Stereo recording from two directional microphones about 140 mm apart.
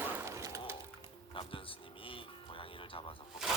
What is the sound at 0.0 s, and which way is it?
Shatter, 15° right (ahead or behind).